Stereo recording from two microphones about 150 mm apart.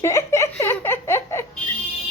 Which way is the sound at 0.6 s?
15° left (ahead or behind).